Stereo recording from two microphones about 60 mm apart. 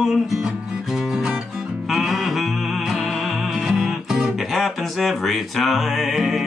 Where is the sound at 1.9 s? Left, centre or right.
Centre.